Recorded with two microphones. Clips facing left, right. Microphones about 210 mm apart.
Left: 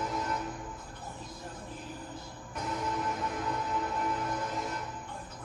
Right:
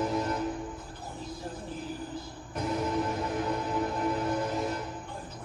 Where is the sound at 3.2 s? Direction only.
30° right (ahead or behind).